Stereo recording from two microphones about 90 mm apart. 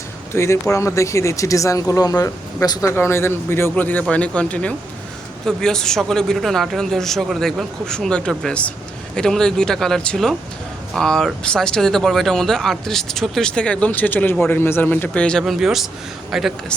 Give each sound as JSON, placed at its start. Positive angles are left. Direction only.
{"t": 0.3, "sound": "speech", "side_deg": 30}
{"t": 2.9, "sound": "a man's voice", "side_deg": 30}
{"t": 15.4, "sound": "speech", "side_deg": -5}